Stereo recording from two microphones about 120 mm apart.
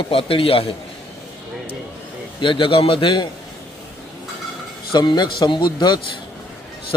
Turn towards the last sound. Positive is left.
turn(degrees=35)  # may be behind; listen again after turning